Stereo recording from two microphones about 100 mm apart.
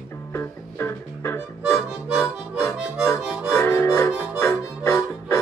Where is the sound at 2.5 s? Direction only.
30° left (ahead or behind).